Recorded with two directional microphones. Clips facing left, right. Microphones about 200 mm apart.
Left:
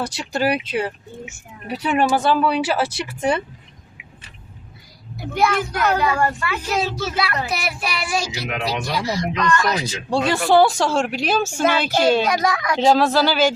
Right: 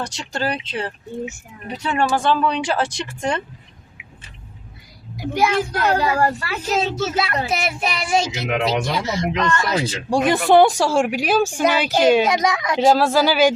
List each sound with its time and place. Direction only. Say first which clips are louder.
0.0 s speech: left 3 dB; 10° left (ahead or behind)
5.7 s a woman's voice: right 1 dB; 30° right (ahead or behind)
6.7 s a woman's voice: right 4 dB; 25° right (ahead or behind)
12.8 s a woman's voice: right 1 dB; 5° right (ahead or behind)